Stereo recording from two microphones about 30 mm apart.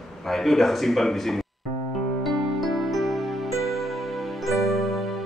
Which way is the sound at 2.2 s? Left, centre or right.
Centre.